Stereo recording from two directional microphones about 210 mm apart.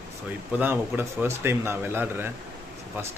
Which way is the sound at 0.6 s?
10° right (ahead or behind).